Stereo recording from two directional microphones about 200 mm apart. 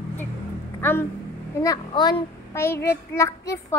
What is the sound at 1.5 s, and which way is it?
A child's voice, 20° left (ahead or behind).